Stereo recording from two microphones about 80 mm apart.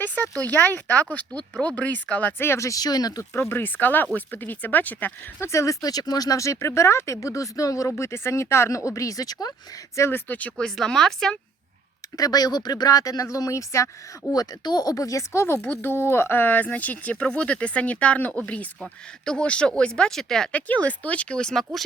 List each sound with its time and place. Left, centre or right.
0.0 s speech: left
2.4 s speech: left
3.5 s speech: left
5.5 s speech: left
10.1 s speech: left
10.8 s speech: centre
12.1 s speech: left
14.3 s speech: left; by 20.5 s centre
20.5 s speech: centre